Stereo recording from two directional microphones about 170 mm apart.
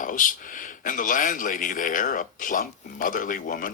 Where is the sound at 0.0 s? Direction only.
50° left (ahead or behind).